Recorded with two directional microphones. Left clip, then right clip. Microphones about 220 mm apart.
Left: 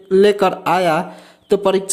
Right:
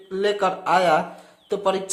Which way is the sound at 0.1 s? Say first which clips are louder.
Left 9 dB; 35° left (ahead or behind).